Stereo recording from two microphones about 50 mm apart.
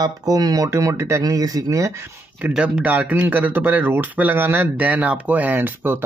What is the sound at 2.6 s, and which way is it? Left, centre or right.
Speech, right.